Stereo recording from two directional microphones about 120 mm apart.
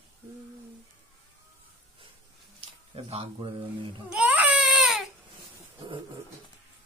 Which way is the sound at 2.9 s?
50° right (ahead or behind).